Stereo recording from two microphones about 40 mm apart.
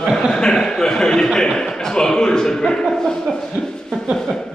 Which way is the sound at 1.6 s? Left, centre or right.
Centre.